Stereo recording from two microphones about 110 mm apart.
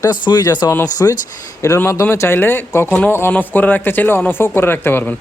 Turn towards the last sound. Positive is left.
turn(degrees=20)  # may be behind; listen again after turning